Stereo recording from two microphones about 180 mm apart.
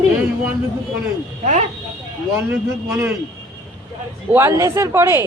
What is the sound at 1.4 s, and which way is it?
Speech, 40° right (ahead or behind).